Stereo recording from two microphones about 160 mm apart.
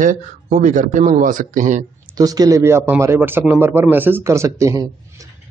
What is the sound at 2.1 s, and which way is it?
A man's voice, 25° right (ahead or behind).